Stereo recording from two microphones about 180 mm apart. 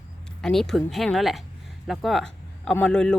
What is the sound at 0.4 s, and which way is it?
Speech, centre (ahead or behind).